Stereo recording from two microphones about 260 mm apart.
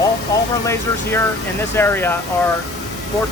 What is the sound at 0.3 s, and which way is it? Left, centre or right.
Vehicle, centre.